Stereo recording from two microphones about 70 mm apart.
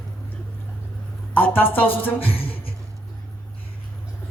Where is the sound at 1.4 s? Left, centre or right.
Left.